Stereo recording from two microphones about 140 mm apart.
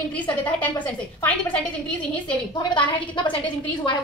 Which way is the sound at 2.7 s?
35° left (ahead or behind).